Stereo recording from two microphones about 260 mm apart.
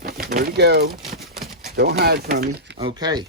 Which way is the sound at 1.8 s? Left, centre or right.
Right.